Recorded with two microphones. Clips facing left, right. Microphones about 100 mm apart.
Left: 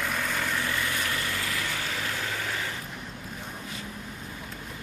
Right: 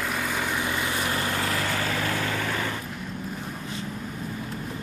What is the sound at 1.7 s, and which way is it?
Vehicle, 60° right (ahead or behind).